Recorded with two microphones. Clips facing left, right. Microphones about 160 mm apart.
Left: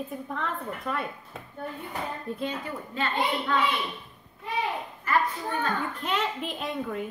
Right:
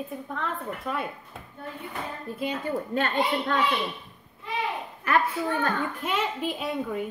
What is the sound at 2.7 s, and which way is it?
Speech, 40° right (ahead or behind).